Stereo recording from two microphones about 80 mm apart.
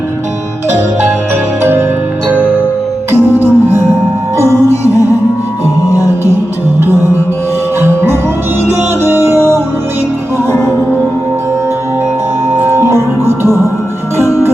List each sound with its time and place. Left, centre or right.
3.1 s music: right
6.8 s music: right
10.5 s music: centre
12.5 s music: right
14.2 s music: left